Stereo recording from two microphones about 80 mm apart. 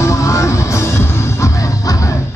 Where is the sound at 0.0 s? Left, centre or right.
Left.